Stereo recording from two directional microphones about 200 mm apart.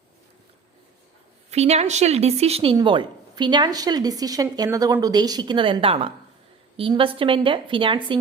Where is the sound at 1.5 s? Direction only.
35° right (ahead or behind).